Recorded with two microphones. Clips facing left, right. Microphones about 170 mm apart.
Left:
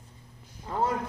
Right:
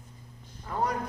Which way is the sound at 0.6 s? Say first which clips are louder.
Left 2 dB; 25° left (ahead or behind).